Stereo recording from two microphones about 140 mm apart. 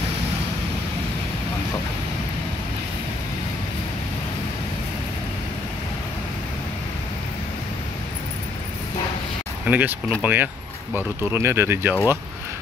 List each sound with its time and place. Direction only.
9.7 s speech: 10° right (ahead or behind)